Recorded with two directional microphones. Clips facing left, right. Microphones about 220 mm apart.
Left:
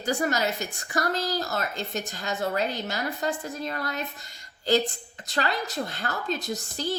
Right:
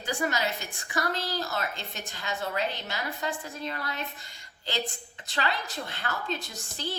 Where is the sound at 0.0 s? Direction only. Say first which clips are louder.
Left 4 dB; 40° left (ahead or behind).